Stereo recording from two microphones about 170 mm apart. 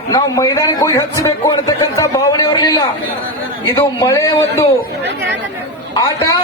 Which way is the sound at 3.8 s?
15° left (ahead or behind).